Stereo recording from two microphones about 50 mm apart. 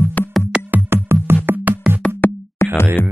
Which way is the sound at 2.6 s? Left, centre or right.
Left.